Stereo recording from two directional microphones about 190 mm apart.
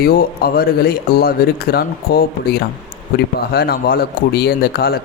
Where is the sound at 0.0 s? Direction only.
50° left (ahead or behind).